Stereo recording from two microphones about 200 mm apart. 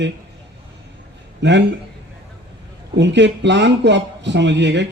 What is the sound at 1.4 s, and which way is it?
Speech, 60° right (ahead or behind).